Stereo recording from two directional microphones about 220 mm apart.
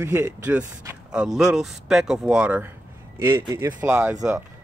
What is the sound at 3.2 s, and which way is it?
Speech, 15° right (ahead or behind).